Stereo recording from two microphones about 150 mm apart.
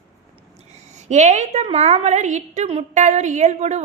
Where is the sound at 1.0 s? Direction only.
50° right (ahead or behind).